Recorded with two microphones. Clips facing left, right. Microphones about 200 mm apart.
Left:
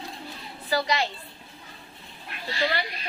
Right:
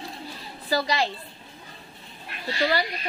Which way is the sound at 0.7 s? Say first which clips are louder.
Right 1 dB; 35° right (ahead or behind).